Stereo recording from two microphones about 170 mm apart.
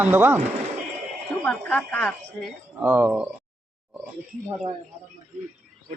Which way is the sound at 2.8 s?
10° right (ahead or behind).